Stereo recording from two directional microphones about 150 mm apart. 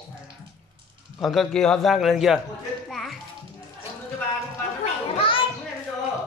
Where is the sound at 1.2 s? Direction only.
Centre (ahead or behind).